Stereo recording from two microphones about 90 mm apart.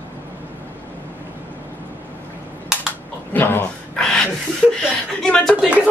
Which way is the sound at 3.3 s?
20° left (ahead or behind).